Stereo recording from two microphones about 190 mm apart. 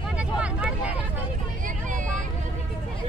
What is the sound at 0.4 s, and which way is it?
Vehicle, 5° right (ahead or behind).